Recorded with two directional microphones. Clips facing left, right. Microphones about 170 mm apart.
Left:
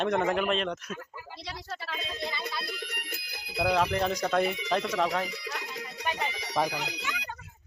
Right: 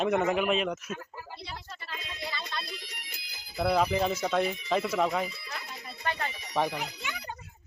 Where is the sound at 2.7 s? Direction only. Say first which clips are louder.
Left 6 dB; 60° left (ahead or behind).